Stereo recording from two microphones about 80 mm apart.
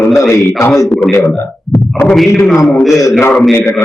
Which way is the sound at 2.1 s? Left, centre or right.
Centre.